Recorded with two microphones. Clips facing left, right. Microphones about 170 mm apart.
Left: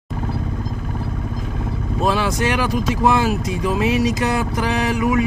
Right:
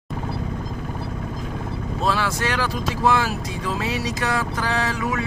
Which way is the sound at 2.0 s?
20° left (ahead or behind).